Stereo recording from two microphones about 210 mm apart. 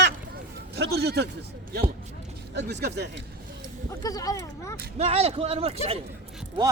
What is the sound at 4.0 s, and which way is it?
Speech, 15° left (ahead or behind).